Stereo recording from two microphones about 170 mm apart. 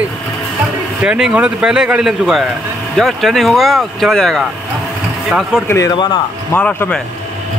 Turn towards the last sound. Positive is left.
turn(degrees=10)  # may be behind; listen again after turning